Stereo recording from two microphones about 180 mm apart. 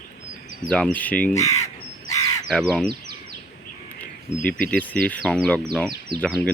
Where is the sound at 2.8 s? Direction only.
60° right (ahead or behind).